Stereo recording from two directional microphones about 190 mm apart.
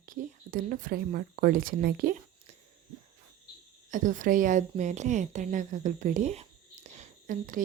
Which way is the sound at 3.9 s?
40° right (ahead or behind).